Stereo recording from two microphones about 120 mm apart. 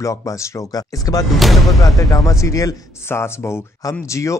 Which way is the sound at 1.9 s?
25° left (ahead or behind).